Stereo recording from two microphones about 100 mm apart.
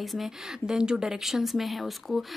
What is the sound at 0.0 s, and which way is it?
Speech, centre (ahead or behind).